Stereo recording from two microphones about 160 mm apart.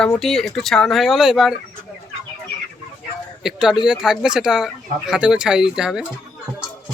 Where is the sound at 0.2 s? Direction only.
5° left (ahead or behind).